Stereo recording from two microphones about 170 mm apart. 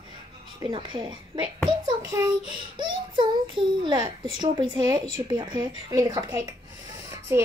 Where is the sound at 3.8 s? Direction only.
25° right (ahead or behind).